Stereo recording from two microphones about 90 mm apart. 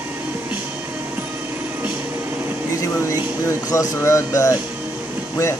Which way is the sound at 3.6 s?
35° left (ahead or behind).